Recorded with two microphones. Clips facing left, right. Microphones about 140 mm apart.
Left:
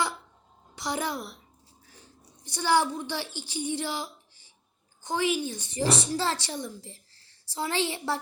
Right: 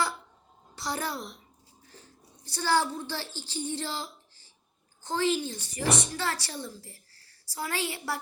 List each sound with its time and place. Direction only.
0.8 s a child's voice: 15° left (ahead or behind)
2.4 s a woman's voice: 15° left (ahead or behind)